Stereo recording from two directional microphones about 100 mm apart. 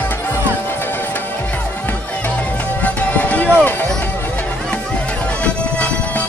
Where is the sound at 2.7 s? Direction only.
15° left (ahead or behind).